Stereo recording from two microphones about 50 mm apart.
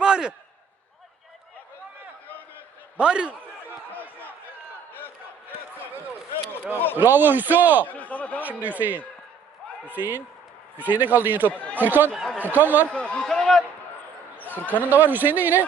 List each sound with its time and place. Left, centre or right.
0.0 s a sound: centre
3.0 s a man's voice: centre
4.9 s battle cry: left
6.9 s speech: right
7.9 s a sound: left
8.4 s speech: right
11.5 s speech: left
11.8 s speech: right
12.9 s speech: left
13.4 s a sound: centre
14.7 s speech: right